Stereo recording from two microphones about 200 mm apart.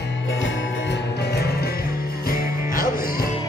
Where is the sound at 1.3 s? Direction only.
50° left (ahead or behind).